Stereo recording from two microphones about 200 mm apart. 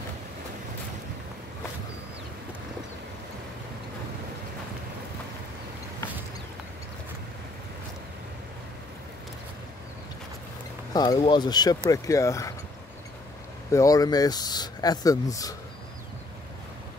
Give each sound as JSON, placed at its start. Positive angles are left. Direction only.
{"t": 10.9, "sound": "speech", "side_deg": 20}
{"t": 13.7, "sound": "speech", "side_deg": 15}